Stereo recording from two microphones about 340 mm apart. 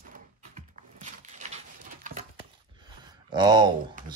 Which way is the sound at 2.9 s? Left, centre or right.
Centre.